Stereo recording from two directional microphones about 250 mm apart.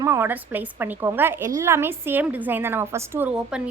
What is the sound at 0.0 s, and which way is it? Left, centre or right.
A woman's voice, centre.